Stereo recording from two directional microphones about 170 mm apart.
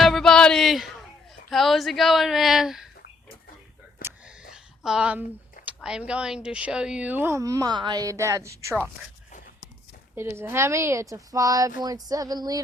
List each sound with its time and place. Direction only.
0.0 s music: centre (ahead or behind)
1.5 s a woman's voice: centre (ahead or behind)
4.0 s whispering: 60° left (ahead or behind)
4.5 s a sound: 5° right (ahead or behind)
5.6 s a woman's voice: 5° right (ahead or behind)
10.2 s a woman's voice: 15° right (ahead or behind)
11.8 s a sound: 20° right (ahead or behind)